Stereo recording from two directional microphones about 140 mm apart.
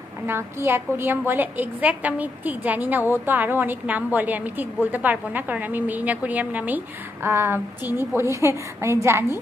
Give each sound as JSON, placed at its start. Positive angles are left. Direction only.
{"t": 0.3, "sound": "a woman's voice", "side_deg": -15}